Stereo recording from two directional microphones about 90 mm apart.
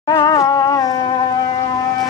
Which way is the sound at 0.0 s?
50° left (ahead or behind).